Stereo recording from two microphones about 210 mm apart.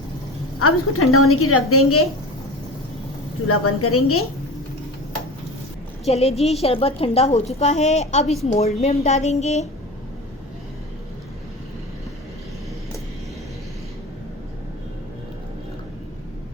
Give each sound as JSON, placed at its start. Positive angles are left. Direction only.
{"t": 0.6, "sound": "a woman's voice", "side_deg": 90}
{"t": 3.4, "sound": "a woman's voice", "side_deg": 90}
{"t": 6.1, "sound": "a woman's voice", "side_deg": 30}